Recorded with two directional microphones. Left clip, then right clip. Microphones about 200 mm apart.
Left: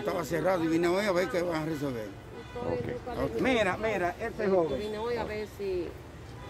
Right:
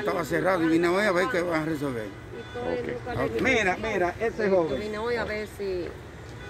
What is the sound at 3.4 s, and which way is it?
Speech, 30° left (ahead or behind).